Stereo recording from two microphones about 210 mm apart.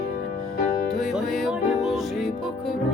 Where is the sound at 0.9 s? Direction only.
Centre (ahead or behind).